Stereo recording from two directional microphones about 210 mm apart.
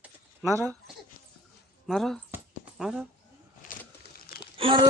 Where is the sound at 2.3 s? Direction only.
5° right (ahead or behind).